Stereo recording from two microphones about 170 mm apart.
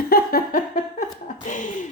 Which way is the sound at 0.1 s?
60° left (ahead or behind).